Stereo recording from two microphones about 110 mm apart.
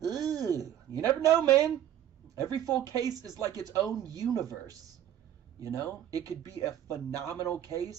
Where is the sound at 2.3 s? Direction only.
35° right (ahead or behind).